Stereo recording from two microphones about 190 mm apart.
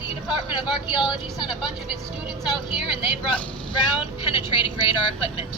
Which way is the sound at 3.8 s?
25° left (ahead or behind).